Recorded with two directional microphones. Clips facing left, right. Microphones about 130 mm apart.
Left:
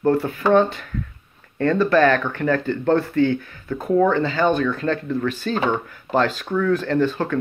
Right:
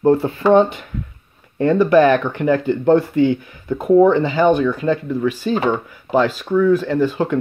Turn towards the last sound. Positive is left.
turn(degrees=-15)  # may be behind; listen again after turning